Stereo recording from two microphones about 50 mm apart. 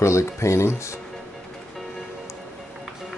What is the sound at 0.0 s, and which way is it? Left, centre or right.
Speech, left.